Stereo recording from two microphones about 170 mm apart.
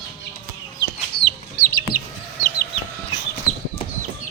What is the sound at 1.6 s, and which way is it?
Chicken, 65° left (ahead or behind).